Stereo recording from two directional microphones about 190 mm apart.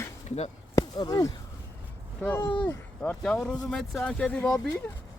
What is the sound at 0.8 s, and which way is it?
Speech, 20° left (ahead or behind).